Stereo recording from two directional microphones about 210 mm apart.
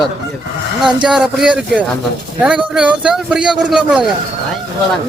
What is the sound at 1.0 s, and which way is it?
A man's voice, 5° right (ahead or behind).